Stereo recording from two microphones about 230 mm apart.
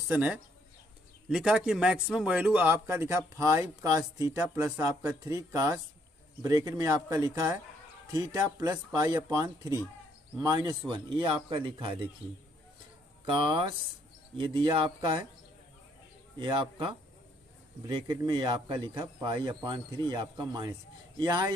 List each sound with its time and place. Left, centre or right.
0.1 s speech: centre
13.2 s speech: right
16.3 s speech: centre